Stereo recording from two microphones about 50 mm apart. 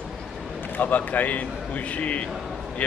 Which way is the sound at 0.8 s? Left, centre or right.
Left.